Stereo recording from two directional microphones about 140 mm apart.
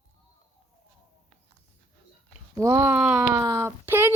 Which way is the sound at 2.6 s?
20° right (ahead or behind).